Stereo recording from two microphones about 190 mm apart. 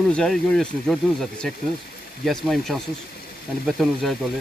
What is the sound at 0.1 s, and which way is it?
Speech, 5° left (ahead or behind).